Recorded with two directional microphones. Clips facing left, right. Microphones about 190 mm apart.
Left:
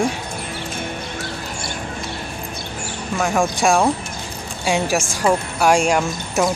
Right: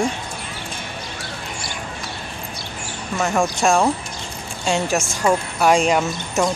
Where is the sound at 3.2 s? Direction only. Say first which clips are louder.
Left 1 dB; centre (ahead or behind).